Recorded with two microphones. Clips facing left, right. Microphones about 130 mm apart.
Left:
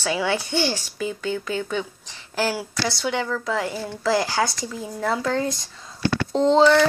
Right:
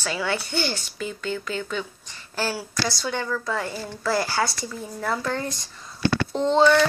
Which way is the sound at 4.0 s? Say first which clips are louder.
Left 2 dB; 90° left.